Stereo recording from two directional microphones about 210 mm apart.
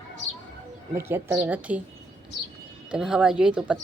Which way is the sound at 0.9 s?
10° right (ahead or behind).